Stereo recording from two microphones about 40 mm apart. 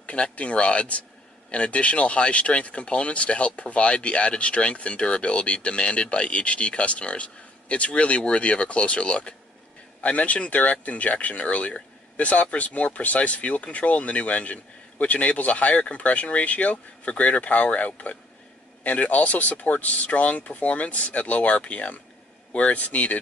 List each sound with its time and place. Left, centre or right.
0.0 s speech: left